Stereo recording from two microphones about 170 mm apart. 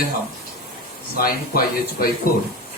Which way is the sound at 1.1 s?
60° left (ahead or behind).